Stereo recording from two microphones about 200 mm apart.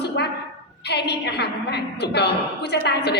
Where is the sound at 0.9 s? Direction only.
55° left (ahead or behind).